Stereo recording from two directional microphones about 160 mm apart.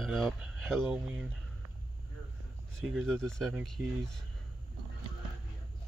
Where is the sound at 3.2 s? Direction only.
5° left (ahead or behind).